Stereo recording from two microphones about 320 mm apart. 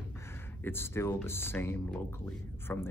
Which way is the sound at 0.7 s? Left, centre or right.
Centre.